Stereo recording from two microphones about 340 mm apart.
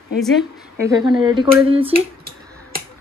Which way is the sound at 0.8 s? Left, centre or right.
Centre.